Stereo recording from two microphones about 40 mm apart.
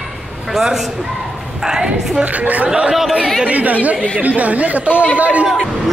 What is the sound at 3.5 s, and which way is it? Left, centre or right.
Speech, right.